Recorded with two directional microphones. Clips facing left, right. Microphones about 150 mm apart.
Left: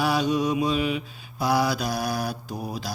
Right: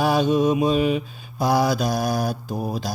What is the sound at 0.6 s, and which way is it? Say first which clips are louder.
Mantra: right 5 dB; 45° right (ahead or behind).